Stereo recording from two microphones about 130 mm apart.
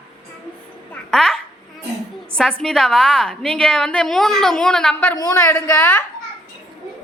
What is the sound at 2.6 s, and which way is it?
A woman's voice, 5° left (ahead or behind).